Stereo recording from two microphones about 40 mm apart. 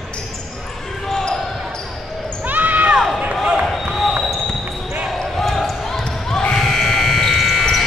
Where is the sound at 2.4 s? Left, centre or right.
Right.